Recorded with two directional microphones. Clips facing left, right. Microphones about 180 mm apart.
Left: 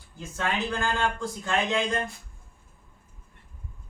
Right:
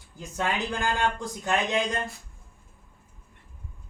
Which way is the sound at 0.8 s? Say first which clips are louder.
Right 1 dB; 20° right (ahead or behind).